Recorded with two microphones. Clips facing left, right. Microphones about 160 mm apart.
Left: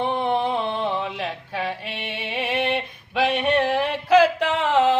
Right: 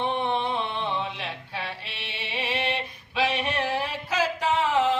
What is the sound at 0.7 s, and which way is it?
Music, 45° left (ahead or behind).